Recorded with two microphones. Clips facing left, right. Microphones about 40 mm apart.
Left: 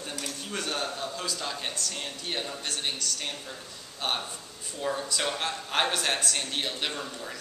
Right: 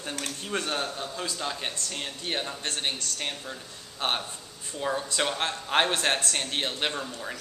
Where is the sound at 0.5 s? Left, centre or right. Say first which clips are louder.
Right 2 dB; right.